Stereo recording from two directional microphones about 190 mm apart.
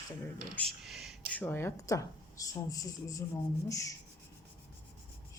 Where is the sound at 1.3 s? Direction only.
10° left (ahead or behind).